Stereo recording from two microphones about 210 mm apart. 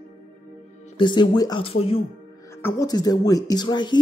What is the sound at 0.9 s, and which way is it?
Speech, 25° left (ahead or behind).